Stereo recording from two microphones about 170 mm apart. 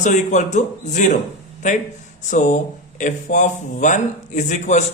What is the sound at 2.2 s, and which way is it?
Speech, 45° left (ahead or behind).